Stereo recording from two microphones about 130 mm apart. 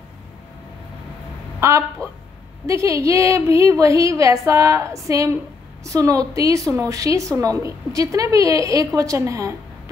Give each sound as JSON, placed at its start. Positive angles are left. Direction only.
{"t": 1.6, "sound": "a woman's voice", "side_deg": -25}